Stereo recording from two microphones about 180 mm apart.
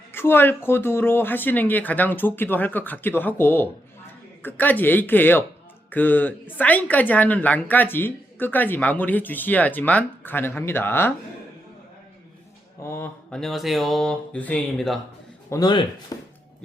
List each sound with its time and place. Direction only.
0.1 s speech: 10° left (ahead or behind)
12.8 s speech: 10° left (ahead or behind)
15.4 s speech: 20° left (ahead or behind)